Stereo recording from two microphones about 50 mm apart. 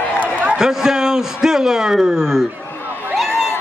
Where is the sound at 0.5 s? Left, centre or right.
Centre.